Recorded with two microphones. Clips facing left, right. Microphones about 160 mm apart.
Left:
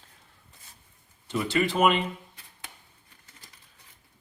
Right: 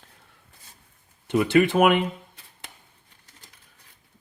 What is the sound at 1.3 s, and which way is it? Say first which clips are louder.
Speech: right 7 dB; 60° right (ahead or behind).